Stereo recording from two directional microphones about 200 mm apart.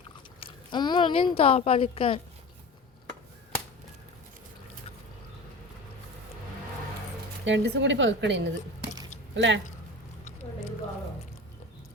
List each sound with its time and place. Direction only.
0.3 s speech: 25° left (ahead or behind)
7.4 s speech: 65° right (ahead or behind)